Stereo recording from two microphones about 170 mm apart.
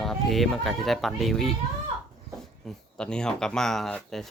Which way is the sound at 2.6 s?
5° left (ahead or behind).